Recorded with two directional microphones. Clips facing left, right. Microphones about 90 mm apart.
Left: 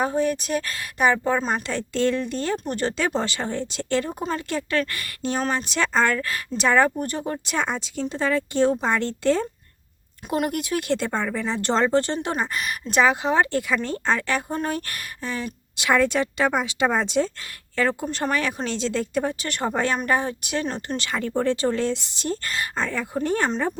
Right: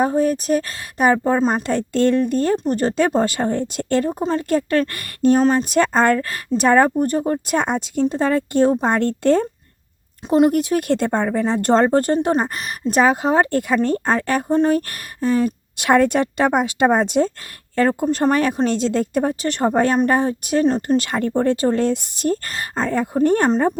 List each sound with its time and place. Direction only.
0.0 s speech: 40° right (ahead or behind)
1.6 s speech: 50° right (ahead or behind)
4.2 s speech: 30° right (ahead or behind)
4.4 s speech: 45° right (ahead or behind)
10.2 s speech: 30° right (ahead or behind)
14.5 s speech: 30° right (ahead or behind)
14.8 s speech: 40° right (ahead or behind)